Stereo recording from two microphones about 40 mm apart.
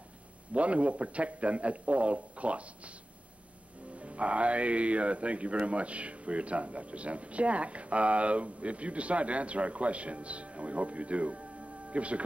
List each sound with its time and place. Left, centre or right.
0.5 s speech: right
3.9 s speech: right